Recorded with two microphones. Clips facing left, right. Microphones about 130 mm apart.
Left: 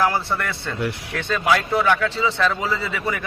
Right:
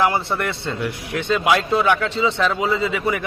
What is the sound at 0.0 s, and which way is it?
A man's voice, 20° right (ahead or behind).